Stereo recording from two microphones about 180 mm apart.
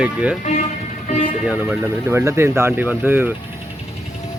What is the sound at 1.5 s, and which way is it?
Speech, 10° right (ahead or behind).